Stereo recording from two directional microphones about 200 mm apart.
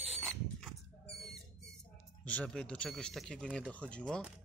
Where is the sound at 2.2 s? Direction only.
5° left (ahead or behind).